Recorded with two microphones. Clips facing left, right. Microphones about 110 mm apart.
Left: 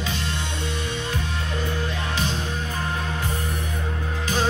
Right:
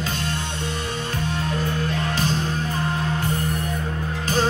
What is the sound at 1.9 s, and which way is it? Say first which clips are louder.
Music: right 3 dB; 45° right (ahead or behind).